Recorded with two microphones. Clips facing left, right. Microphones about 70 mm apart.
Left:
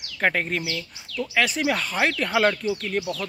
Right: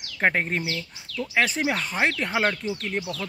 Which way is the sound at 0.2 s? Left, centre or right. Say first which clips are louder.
Even; right.